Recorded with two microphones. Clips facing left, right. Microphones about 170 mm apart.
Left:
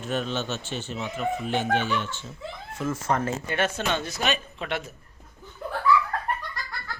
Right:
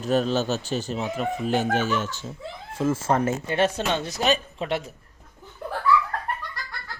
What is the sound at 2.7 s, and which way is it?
Speech, 30° right (ahead or behind).